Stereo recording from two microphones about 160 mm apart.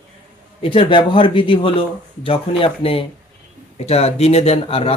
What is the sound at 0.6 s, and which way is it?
Speech, 35° left (ahead or behind).